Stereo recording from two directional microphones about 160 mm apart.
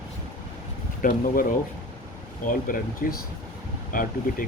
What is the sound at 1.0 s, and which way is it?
Speech, 60° left (ahead or behind).